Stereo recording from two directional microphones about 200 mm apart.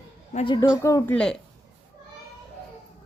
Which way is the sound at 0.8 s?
15° left (ahead or behind).